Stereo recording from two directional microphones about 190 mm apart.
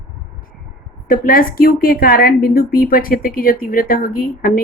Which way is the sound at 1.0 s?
50° left (ahead or behind).